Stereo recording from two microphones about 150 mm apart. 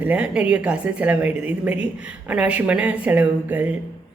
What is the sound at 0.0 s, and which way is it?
A woman's voice, 10° right (ahead or behind).